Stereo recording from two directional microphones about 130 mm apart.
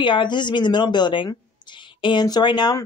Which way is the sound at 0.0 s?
40° left (ahead or behind).